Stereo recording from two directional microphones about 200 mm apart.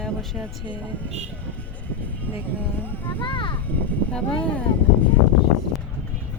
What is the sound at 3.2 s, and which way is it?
Speech, 25° left (ahead or behind).